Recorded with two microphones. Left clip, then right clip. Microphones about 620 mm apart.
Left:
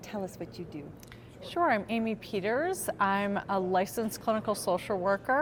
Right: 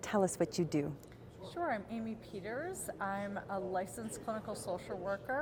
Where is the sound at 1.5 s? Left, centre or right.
Left.